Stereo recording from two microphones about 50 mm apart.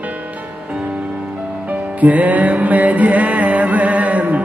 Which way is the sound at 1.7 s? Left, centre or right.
Right.